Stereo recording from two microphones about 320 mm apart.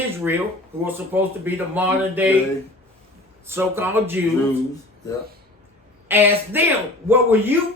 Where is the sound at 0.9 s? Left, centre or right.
Centre.